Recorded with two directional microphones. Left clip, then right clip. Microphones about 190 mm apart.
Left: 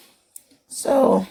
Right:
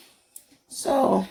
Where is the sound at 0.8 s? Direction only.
40° left (ahead or behind).